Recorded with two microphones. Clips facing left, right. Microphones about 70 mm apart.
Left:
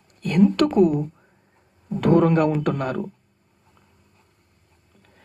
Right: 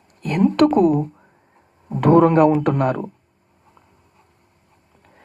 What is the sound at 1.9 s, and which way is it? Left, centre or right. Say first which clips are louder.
Speech: right 4 dB; right.